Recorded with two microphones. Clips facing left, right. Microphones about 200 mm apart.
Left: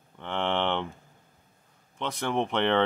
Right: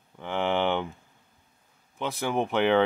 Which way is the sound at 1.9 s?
5° right (ahead or behind).